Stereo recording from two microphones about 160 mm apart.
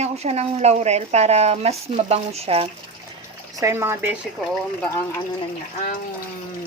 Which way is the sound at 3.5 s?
15° right (ahead or behind).